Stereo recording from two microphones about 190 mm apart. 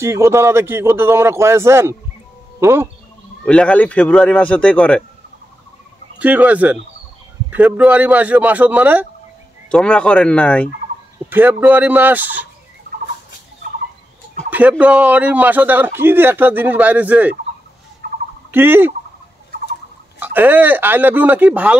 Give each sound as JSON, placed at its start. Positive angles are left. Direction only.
{"t": 0.0, "sound": "a man's voice", "side_deg": -15}
{"t": 3.4, "sound": "speech", "side_deg": 5}
{"t": 6.1, "sound": "a man's voice", "side_deg": -10}
{"t": 9.7, "sound": "speech", "side_deg": 5}
{"t": 11.2, "sound": "a man's voice", "side_deg": -10}
{"t": 14.5, "sound": "a man's voice", "side_deg": -10}
{"t": 18.0, "sound": "fowl", "side_deg": -45}
{"t": 18.5, "sound": "a man's voice", "side_deg": -10}
{"t": 20.3, "sound": "a man's voice", "side_deg": -10}